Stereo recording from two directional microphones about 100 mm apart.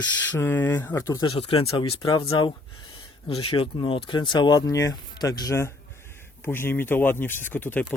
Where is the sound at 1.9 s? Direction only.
55° left (ahead or behind).